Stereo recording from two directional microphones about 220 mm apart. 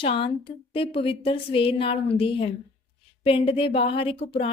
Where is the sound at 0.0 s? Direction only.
25° left (ahead or behind).